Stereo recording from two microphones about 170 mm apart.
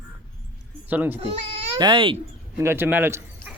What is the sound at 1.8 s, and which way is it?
Speech, 30° right (ahead or behind).